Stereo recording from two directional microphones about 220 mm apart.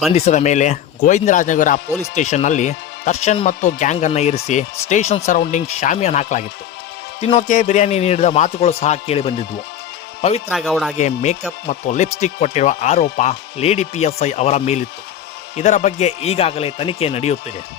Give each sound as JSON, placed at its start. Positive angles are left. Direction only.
{"t": 0.1, "sound": "a man's voice", "side_deg": 30}
{"t": 10.5, "sound": "speech", "side_deg": 0}
{"t": 10.9, "sound": "a man's voice", "side_deg": 30}